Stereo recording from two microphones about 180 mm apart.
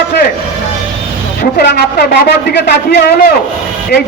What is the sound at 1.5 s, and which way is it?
A man's voice, 60° left (ahead or behind).